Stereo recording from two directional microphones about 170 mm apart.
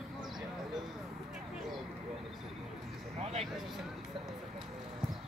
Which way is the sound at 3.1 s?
40° right (ahead or behind).